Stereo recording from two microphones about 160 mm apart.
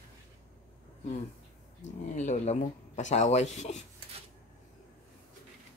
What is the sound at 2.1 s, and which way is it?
Speech, 45° left (ahead or behind).